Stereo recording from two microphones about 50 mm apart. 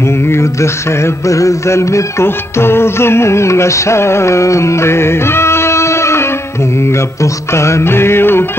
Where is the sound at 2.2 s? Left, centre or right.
Left.